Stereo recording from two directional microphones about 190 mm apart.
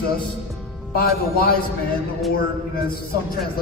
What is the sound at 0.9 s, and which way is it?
Speech, 50° left (ahead or behind).